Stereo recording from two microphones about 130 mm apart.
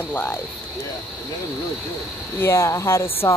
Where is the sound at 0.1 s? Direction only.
15° left (ahead or behind).